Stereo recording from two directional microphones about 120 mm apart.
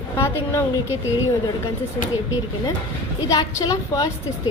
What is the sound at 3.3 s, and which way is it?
Speech, 30° left (ahead or behind).